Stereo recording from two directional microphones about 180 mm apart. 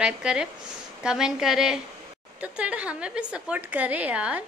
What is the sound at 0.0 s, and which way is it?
A woman's voice, 5° right (ahead or behind).